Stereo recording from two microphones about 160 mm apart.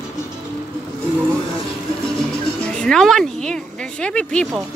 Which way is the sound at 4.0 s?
5° left (ahead or behind).